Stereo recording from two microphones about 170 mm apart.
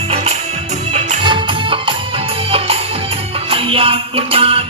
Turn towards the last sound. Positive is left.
turn(degrees=-35)  # may be behind; listen again after turning